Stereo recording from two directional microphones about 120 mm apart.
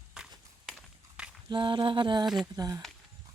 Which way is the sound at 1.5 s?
40° right (ahead or behind).